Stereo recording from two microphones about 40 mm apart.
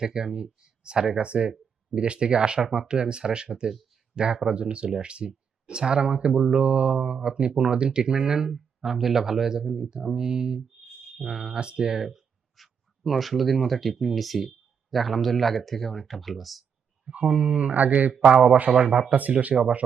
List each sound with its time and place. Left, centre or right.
0.0 s speech: centre
6.6 s speech: right; by 11.5 s centre
11.5 s speech: right
11.8 s speech: centre
12.0 s speech: centre
17.1 s speech: right
18.7 s speech: centre
19.3 s speech: right